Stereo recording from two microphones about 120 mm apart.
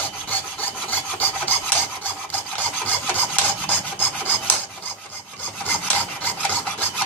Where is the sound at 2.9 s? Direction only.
15° left (ahead or behind).